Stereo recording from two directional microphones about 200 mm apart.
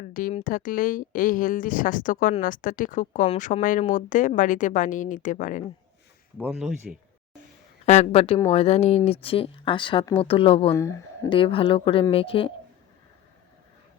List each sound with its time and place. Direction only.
0.1 s speech: 45° left (ahead or behind)
6.5 s speech: centre (ahead or behind)
7.9 s speech: 35° left (ahead or behind)
10.8 s speech: 15° left (ahead or behind)
11.3 s speech: 25° left (ahead or behind)